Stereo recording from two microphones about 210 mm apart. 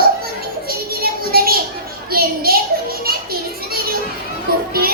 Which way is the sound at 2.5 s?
45° right (ahead or behind).